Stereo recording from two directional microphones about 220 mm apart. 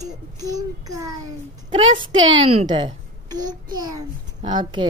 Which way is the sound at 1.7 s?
25° right (ahead or behind).